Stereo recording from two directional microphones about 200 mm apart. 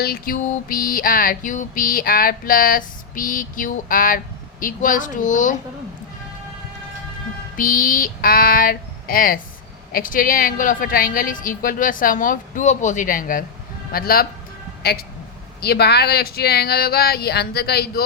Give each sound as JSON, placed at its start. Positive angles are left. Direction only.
{"t": 0.0, "sound": "music", "side_deg": 45}
{"t": 4.6, "sound": "a woman's voice", "side_deg": 40}
{"t": 7.5, "sound": "music", "side_deg": 45}
{"t": 14.8, "sound": "speech", "side_deg": 55}
{"t": 15.6, "sound": "music", "side_deg": 55}